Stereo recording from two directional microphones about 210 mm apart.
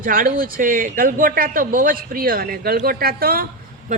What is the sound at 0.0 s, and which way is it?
A man's voice, 40° right (ahead or behind).